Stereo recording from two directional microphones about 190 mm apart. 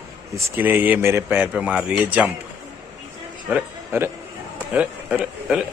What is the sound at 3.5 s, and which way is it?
A man's voice, 10° right (ahead or behind).